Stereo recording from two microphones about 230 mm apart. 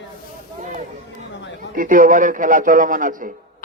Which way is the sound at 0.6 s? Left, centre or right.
Right.